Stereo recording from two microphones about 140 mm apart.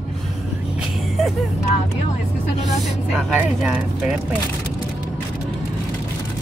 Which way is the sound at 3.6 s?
5° right (ahead or behind).